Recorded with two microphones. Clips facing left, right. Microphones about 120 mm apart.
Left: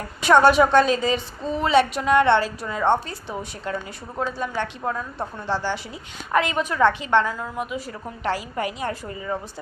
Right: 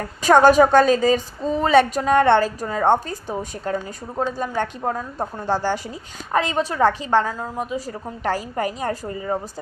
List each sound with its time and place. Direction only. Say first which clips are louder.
0.2 s a woman's voice: right 2 dB; 40° right (ahead or behind)
6.3 s a woman's voice: right 1 dB; 30° right (ahead or behind)